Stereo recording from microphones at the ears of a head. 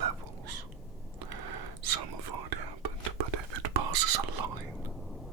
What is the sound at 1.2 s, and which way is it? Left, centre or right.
Whispering, right.